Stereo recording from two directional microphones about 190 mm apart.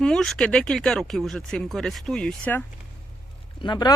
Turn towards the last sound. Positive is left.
turn(degrees=25)  # may be behind; listen again after turning